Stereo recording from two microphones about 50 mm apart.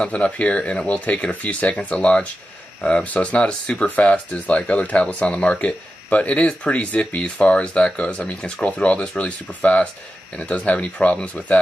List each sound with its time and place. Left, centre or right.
0.1 s speech: left